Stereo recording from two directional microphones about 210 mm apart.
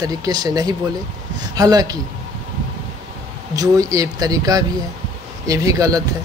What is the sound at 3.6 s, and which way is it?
A man's voice, 15° right (ahead or behind).